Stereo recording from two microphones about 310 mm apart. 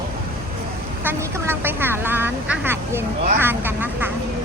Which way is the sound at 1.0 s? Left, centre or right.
Centre.